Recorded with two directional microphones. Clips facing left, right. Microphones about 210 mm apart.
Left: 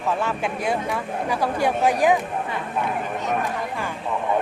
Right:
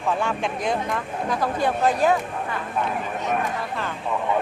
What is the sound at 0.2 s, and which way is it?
Speech, 5° left (ahead or behind).